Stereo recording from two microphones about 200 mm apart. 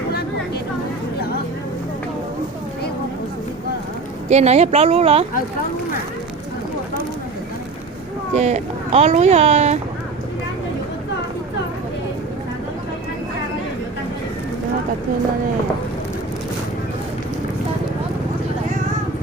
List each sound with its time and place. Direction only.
4.3 s speech: 35° right (ahead or behind)
8.3 s speech: 35° right (ahead or behind)